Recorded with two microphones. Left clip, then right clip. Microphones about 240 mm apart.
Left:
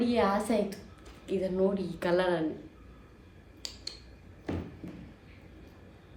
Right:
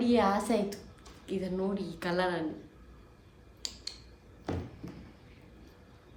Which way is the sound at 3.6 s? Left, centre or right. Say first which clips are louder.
Right 1 dB; centre.